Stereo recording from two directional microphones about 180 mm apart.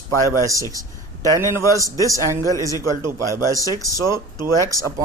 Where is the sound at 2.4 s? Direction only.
20° left (ahead or behind).